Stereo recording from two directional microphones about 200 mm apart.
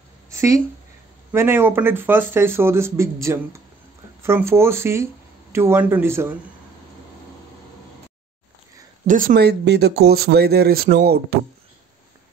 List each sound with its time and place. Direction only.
0.3 s a sound: 15° right (ahead or behind)
1.3 s speech: 10° right (ahead or behind)
9.0 s speech: 40° right (ahead or behind)